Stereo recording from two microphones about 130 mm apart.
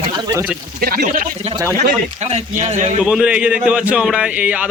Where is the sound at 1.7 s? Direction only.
55° right (ahead or behind).